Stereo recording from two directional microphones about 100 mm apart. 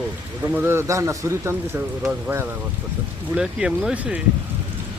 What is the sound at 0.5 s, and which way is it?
A man's voice, 25° right (ahead or behind).